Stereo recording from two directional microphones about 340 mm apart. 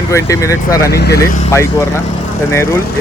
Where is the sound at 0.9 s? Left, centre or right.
Left.